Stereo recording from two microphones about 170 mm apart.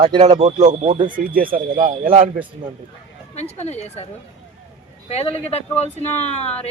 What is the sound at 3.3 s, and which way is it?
Speech, 40° left (ahead or behind).